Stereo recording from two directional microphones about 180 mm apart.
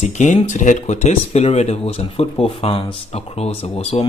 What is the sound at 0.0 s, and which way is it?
Speech, 40° left (ahead or behind).